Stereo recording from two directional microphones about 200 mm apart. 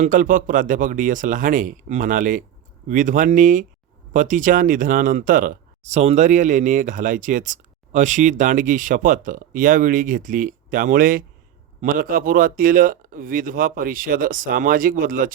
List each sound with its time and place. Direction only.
0.0 s speech: 40° right (ahead or behind)